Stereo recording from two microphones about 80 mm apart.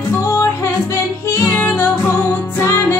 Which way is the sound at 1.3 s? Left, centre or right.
Left.